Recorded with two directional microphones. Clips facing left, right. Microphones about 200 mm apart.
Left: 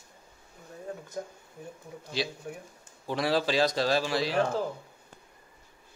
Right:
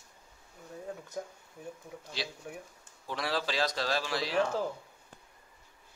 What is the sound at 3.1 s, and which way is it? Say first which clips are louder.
A man's voice: left 7 dB; 15° left (ahead or behind).